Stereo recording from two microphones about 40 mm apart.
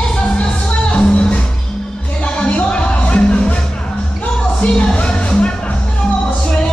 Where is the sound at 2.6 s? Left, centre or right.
Left.